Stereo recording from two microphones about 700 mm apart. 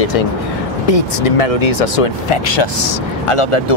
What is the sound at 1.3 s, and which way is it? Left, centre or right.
Speech, left.